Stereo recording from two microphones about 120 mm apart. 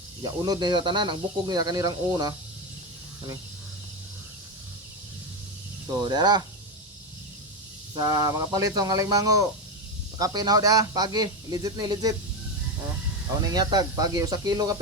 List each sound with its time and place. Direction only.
0.2 s speech: 30° right (ahead or behind)
6.0 s speech: 35° right (ahead or behind)
7.9 s speech: 30° right (ahead or behind)
13.4 s speech: 35° right (ahead or behind)